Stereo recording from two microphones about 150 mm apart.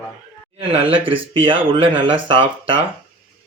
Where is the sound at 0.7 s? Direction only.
35° right (ahead or behind).